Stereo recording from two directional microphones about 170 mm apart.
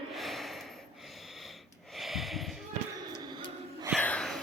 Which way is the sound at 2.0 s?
Centre (ahead or behind).